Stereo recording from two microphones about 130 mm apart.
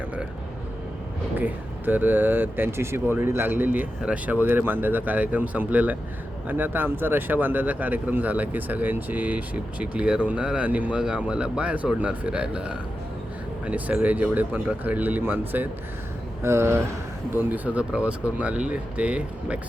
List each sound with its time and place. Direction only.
1.4 s speech: 15° right (ahead or behind)
17.5 s speech: 10° right (ahead or behind)